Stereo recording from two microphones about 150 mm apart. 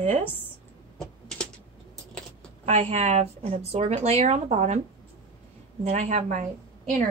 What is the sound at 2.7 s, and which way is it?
A woman's voice, 50° right (ahead or behind).